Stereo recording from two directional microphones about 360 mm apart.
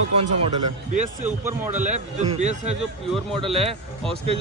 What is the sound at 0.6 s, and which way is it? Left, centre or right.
Speech, right.